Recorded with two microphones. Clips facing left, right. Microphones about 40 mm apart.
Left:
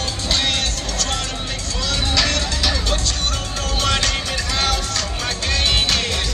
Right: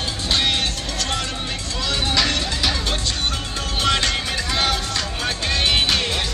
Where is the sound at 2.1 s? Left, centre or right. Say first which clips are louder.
Left 1 dB; centre.